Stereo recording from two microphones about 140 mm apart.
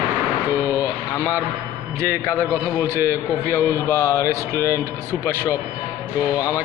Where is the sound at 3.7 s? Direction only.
20° left (ahead or behind).